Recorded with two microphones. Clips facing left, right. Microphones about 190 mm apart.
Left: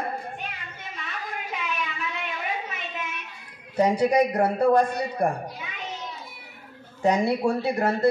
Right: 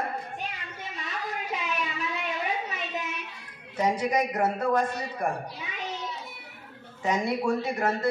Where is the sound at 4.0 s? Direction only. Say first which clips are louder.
Left 5 dB; 35° left (ahead or behind).